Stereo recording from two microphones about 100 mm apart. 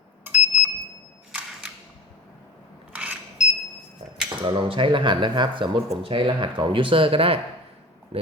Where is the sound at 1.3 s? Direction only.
10° right (ahead or behind).